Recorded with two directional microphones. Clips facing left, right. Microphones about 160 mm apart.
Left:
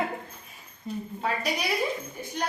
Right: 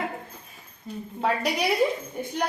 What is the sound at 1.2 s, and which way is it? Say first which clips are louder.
Speech: right 5 dB; 65° right (ahead or behind).